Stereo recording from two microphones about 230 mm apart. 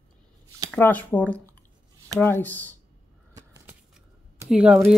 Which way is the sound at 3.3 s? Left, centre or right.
Centre.